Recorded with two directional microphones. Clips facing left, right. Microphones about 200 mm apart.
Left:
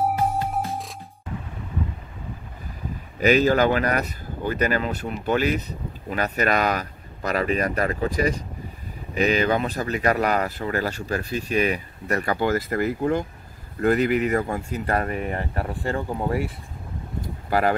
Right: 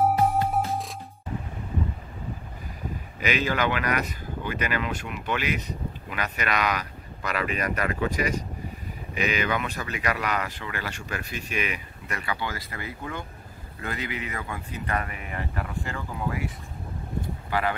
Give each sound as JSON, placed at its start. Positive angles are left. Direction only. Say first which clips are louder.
{"t": 0.7, "sound": "music", "louder": "right 1 dB", "side_deg": 0}
{"t": 3.2, "sound": "speech", "louder": "left 8 dB", "side_deg": 40}
{"t": 17.5, "sound": "speech", "louder": "left 6 dB", "side_deg": 40}